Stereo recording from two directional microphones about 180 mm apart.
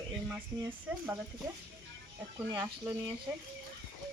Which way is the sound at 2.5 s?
20° right (ahead or behind).